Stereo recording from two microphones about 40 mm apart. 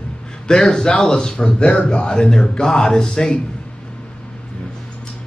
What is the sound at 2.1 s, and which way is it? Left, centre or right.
A man's voice, centre.